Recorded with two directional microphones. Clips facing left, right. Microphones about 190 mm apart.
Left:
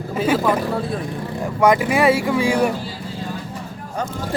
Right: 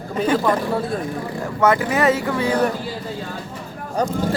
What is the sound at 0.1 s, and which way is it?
Speech, 5° left (ahead or behind).